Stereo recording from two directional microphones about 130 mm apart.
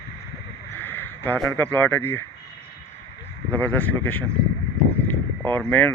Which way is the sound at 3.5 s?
15° left (ahead or behind).